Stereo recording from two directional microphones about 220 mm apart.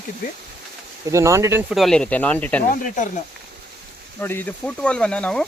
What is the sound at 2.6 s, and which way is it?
Speech, 35° left (ahead or behind).